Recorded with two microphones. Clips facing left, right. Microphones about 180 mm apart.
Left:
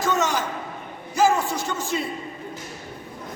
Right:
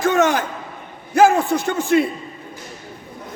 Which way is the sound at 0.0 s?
55° right (ahead or behind).